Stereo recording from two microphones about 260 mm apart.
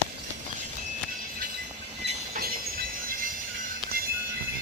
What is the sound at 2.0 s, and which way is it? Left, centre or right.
Train, right.